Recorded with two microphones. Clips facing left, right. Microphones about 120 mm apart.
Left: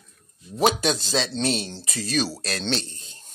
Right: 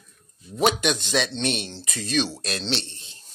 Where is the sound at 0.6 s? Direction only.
35° left (ahead or behind).